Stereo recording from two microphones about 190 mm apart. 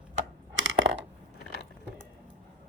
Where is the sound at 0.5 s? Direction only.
90° right.